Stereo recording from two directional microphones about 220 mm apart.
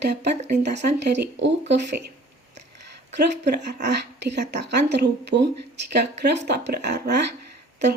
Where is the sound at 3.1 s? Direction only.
50° right (ahead or behind).